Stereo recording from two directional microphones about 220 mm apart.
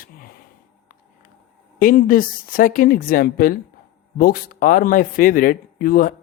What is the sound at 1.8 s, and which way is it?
Speech, 40° left (ahead or behind).